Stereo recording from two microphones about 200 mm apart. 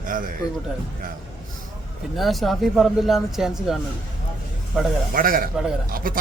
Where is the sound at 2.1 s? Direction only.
Centre (ahead or behind).